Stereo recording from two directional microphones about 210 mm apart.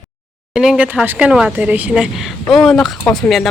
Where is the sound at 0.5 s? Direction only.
5° right (ahead or behind).